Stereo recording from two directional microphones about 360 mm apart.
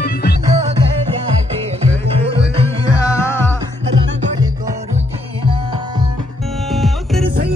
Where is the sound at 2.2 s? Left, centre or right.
Centre.